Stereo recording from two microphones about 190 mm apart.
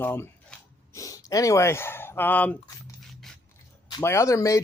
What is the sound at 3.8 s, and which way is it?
Speech, 20° left (ahead or behind).